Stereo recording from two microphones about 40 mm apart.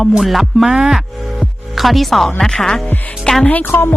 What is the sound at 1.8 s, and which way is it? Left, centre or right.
Speech, centre.